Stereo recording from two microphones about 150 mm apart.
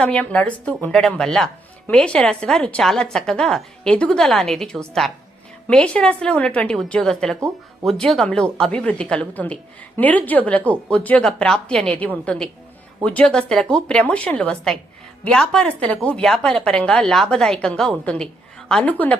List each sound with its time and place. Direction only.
0.0 s a woman's voice: 10° left (ahead or behind)
7.3 s speech: 20° right (ahead or behind)
7.9 s a woman's voice: centre (ahead or behind)